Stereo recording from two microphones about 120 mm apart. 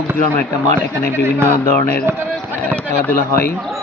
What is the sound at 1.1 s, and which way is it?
Speech, 20° right (ahead or behind).